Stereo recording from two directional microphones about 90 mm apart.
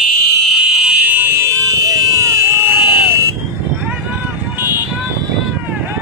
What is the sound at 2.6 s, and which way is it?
Vehicle, 25° right (ahead or behind).